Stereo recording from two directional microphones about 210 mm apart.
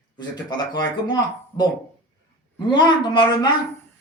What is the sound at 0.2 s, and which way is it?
Speech, 20° left (ahead or behind).